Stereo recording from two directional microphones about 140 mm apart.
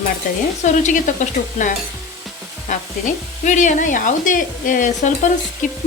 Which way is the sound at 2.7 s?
60° left (ahead or behind).